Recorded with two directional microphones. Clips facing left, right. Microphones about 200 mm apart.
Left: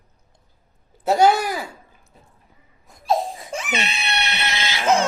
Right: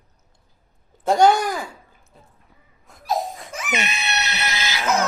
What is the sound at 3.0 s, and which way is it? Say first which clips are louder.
Crying: left 3 dB; 25° left (ahead or behind).